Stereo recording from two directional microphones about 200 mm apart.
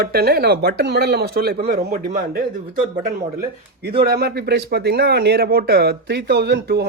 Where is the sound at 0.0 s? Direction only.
50° right (ahead or behind).